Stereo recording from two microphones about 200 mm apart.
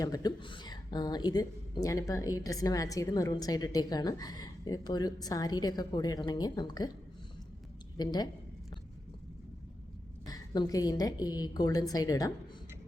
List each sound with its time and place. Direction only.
0.0 s a woman's voice: 20° left (ahead or behind)
7.9 s a woman's voice: 20° left (ahead or behind)
10.2 s a woman's voice: 20° left (ahead or behind)